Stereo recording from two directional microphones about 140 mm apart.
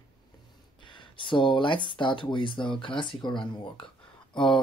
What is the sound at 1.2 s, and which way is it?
Speech, 35° left (ahead or behind).